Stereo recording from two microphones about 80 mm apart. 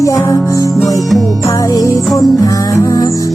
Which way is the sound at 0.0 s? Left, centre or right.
Left.